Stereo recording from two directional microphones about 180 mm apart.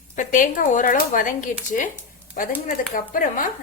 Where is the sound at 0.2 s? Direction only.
45° left (ahead or behind).